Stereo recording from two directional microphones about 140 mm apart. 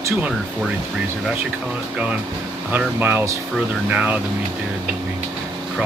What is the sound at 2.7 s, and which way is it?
Speech, 15° right (ahead or behind).